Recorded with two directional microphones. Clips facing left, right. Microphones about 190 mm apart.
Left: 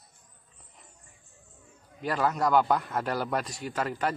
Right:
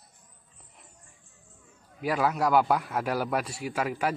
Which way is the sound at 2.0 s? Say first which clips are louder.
Right 1 dB; 10° right (ahead or behind).